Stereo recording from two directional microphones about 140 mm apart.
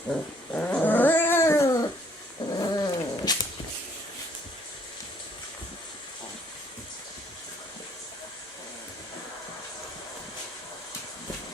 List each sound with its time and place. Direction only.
0.1 s dog: 10° left (ahead or behind)
2.6 s cat: 30° left (ahead or behind)